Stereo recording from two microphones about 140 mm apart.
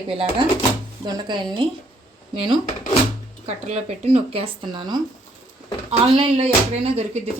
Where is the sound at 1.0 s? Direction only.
30° right (ahead or behind).